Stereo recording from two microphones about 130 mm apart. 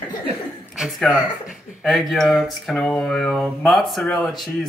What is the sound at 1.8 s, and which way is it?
Speech, centre (ahead or behind).